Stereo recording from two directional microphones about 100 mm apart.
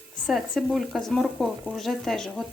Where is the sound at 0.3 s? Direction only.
Centre (ahead or behind).